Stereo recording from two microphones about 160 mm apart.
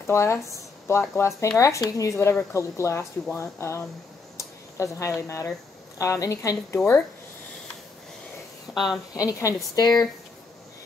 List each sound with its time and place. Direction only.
0.0 s speech: 15° left (ahead or behind)
8.7 s speech: centre (ahead or behind)
9.1 s speech: 20° left (ahead or behind)